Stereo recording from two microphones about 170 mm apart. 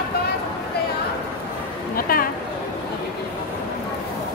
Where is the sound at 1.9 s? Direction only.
60° left (ahead or behind).